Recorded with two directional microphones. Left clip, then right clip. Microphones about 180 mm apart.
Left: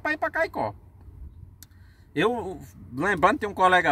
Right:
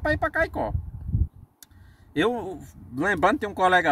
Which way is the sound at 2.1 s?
5° left (ahead or behind).